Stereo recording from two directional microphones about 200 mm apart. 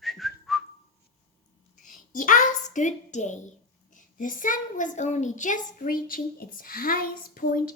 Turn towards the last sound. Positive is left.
turn(degrees=45)  # may be behind; listen again after turning